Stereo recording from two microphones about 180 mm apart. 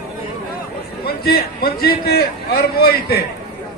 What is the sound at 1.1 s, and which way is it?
A man's voice, 60° left (ahead or behind).